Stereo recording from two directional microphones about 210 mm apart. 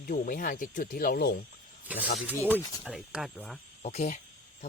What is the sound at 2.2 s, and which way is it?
Speech, 10° right (ahead or behind).